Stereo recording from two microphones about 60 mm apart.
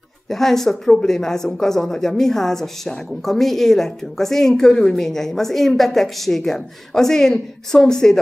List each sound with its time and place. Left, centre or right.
0.3 s speech: centre